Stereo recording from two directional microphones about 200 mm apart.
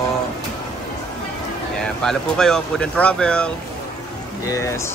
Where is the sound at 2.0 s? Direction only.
Centre (ahead or behind).